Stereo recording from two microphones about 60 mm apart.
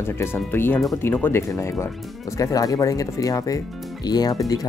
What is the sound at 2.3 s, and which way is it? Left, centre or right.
Speech, left.